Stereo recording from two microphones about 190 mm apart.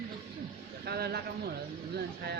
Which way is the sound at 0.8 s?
55° right (ahead or behind).